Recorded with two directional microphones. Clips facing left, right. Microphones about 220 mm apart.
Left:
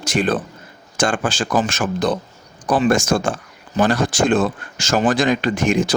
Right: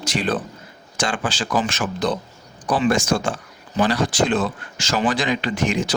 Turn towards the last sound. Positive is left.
turn(degrees=50)  # may be behind; listen again after turning